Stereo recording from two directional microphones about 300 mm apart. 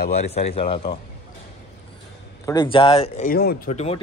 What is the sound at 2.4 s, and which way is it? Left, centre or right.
Speech, centre.